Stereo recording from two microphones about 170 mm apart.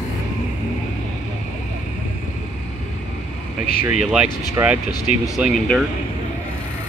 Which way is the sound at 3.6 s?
55° left (ahead or behind).